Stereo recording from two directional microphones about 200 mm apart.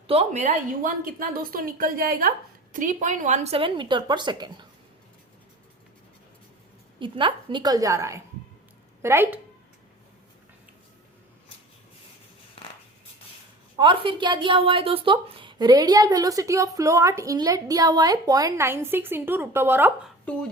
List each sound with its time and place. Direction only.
0.1 s a woman's voice: 35° right (ahead or behind)
7.0 s a woman's voice: 25° right (ahead or behind)
12.6 s a sound: 30° left (ahead or behind)
13.7 s a woman's voice: 25° right (ahead or behind)